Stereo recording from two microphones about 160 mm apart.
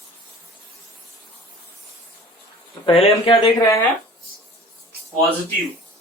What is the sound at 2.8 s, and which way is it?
Speech, 35° left (ahead or behind).